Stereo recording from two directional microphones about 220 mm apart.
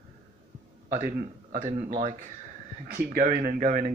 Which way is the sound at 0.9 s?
40° right (ahead or behind).